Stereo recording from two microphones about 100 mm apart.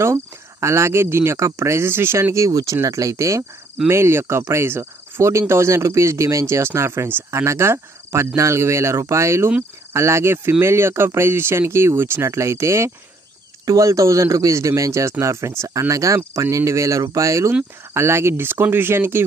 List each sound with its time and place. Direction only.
0.0 s a man's voice: 30° right (ahead or behind)
3.8 s cricket: 25° right (ahead or behind)
13.7 s a man's voice: 35° right (ahead or behind)
17.9 s cricket: 25° right (ahead or behind)